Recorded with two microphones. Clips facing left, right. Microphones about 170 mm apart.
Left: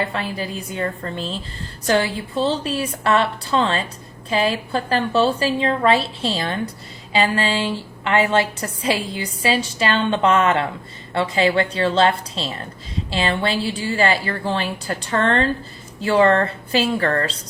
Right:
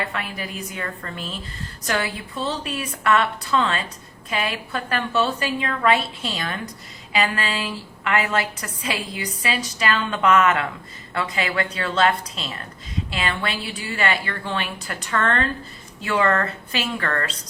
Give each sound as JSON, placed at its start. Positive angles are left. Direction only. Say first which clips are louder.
{"t": 0.0, "sound": "a woman's voice", "louder": "left 5 dB", "side_deg": 30}